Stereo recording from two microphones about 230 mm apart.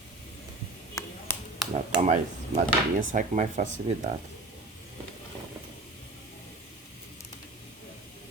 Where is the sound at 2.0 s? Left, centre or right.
Right.